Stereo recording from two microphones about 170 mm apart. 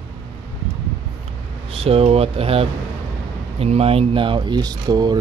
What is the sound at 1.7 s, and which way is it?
Speech, 35° right (ahead or behind).